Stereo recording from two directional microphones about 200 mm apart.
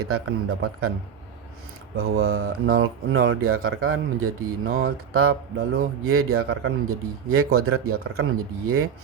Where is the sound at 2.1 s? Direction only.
90° right.